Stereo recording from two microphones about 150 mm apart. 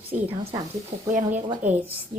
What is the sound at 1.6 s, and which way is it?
Speech, 10° right (ahead or behind).